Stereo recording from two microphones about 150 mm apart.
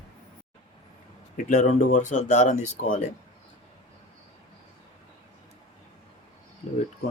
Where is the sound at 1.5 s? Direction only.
55° left (ahead or behind).